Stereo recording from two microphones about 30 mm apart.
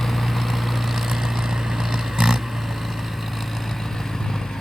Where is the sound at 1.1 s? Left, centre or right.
Centre.